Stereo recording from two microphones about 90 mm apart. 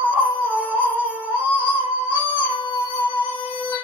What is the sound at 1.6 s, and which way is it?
Female singing, 20° right (ahead or behind).